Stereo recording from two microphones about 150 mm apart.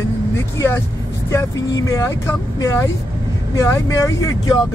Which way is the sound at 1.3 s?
20° left (ahead or behind).